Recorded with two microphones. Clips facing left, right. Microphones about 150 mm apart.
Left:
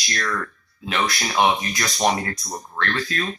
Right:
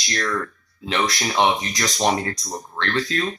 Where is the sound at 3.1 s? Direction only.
25° right (ahead or behind).